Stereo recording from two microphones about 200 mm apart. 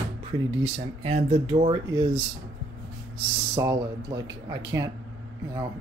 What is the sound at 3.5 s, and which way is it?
Speech, 20° right (ahead or behind).